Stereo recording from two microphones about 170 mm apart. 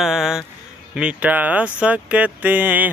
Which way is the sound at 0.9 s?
5° right (ahead or behind).